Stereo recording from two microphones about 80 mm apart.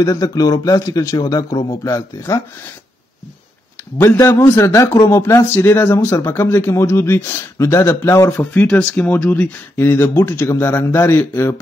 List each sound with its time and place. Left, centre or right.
0.0 s a man's voice: left
4.7 s speech: left
8.4 s speech: centre